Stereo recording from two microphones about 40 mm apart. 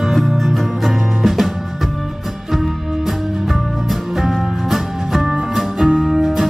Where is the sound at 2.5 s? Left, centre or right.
Centre.